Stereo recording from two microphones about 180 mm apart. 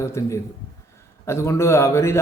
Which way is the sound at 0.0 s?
15° left (ahead or behind).